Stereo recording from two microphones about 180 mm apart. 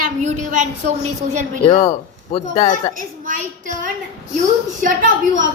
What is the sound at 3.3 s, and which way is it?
Speech, 45° right (ahead or behind).